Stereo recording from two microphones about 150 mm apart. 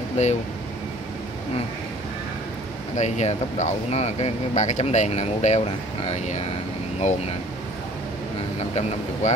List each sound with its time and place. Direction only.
0.2 s speech: 50° left (ahead or behind)
3.0 s speech: 50° left (ahead or behind)
9.2 s speech: 50° left (ahead or behind)